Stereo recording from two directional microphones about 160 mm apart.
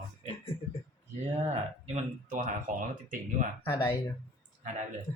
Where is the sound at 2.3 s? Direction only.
55° right (ahead or behind).